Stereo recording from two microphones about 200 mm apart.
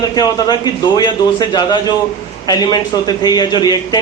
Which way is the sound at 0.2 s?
20° left (ahead or behind).